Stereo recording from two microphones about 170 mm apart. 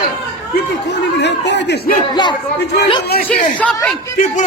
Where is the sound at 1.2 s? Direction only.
90° left.